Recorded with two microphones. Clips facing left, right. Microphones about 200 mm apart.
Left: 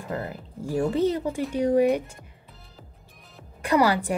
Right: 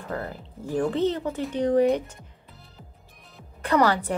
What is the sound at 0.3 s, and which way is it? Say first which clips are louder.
Speech: even; 10° left (ahead or behind).